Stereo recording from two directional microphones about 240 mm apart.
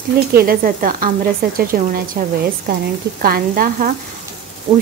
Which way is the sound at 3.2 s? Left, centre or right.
Right.